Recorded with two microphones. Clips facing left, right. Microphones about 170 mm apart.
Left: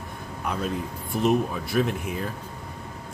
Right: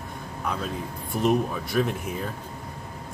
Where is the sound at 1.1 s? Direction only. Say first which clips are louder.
Left 1 dB; centre (ahead or behind).